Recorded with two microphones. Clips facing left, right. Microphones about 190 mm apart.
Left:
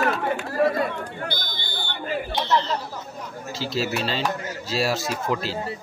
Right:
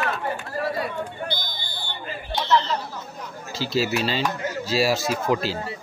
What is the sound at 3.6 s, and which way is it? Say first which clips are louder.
Speech: right 3 dB; centre (ahead or behind).